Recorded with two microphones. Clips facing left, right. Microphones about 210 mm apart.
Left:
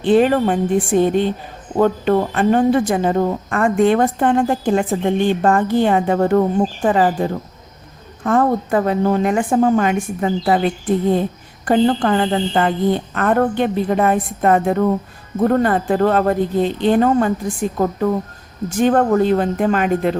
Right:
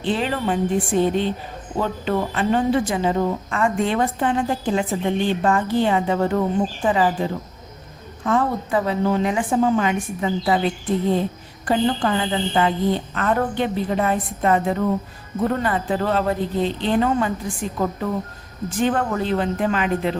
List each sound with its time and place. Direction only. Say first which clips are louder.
0.0 s a woman's voice: left 9 dB; 50° left (ahead or behind)
11.6 s a woman's voice: left 5 dB; 50° left (ahead or behind)